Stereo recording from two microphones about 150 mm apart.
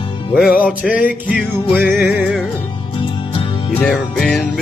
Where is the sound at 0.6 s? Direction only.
5° right (ahead or behind).